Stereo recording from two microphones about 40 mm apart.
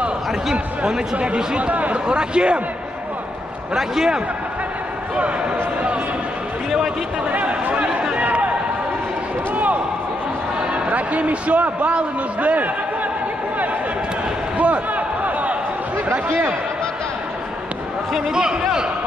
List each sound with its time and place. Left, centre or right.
1.1 s speech: right
1.7 s speech: right
2.0 s speech: right
3.7 s a man's voice: centre
5.2 s speech: right
7.2 s a sound: right
7.7 s chatter: right
8.2 s a sound: right
10.7 s a man's voice: right
14.6 s a sound: right
16.1 s speech: right
18.3 s a man's voice: centre